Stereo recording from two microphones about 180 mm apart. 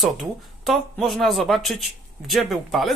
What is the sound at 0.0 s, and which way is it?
Speech, centre (ahead or behind).